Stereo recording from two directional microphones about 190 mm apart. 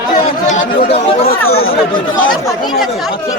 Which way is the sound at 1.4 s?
90° left.